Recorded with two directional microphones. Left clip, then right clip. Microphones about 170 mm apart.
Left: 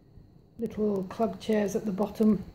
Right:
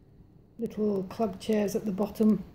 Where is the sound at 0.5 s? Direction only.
Centre (ahead or behind).